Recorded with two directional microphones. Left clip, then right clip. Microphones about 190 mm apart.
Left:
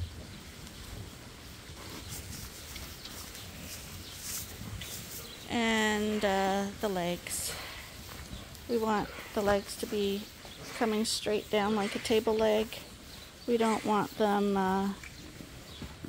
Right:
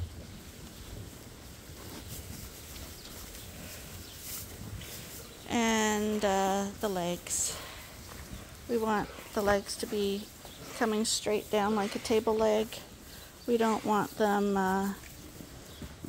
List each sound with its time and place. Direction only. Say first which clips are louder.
5.5 s speech: even; 10° right (ahead or behind)
8.7 s speech: even; centre (ahead or behind)